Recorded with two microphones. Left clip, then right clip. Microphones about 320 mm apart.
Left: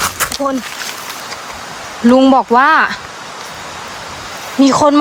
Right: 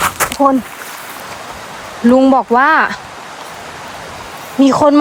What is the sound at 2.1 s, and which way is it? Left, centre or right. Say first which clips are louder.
Speech: left 1 dB; centre.